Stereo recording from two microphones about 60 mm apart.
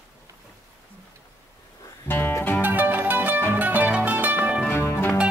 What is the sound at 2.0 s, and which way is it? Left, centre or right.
Music, left.